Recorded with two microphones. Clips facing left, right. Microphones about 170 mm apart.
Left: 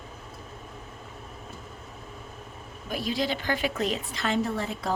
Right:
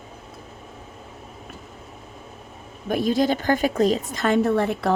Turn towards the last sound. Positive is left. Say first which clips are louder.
# right 9 dB
turn(degrees=-60)  # may be behind; listen again after turning